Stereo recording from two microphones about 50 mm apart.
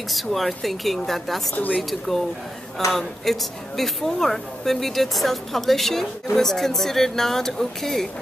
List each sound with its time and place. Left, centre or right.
0.1 s a woman's voice: centre
1.5 s speech: left
1.8 s a woman's voice: centre